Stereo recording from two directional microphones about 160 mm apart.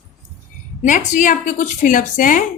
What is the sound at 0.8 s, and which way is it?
Speech, 50° left (ahead or behind).